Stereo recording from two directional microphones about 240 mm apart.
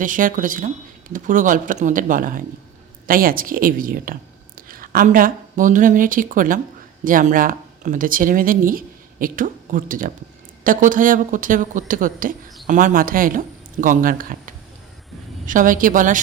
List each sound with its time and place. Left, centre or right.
0.0 s a woman's voice: right